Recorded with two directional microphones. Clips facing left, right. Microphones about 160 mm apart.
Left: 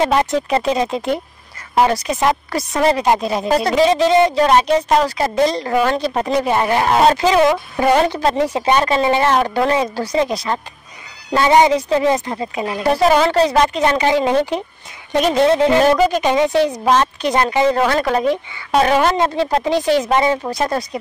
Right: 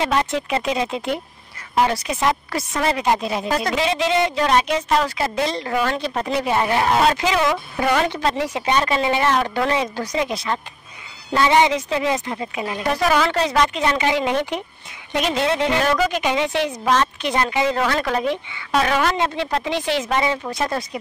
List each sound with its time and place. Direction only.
0.0 s speech: 40° left (ahead or behind)